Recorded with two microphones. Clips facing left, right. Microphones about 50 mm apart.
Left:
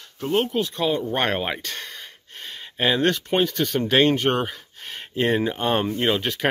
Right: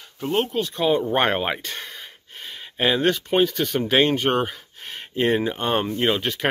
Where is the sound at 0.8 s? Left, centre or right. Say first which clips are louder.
Right 5 dB; centre.